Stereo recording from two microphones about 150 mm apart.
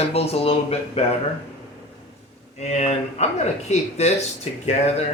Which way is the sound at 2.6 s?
50° left (ahead or behind).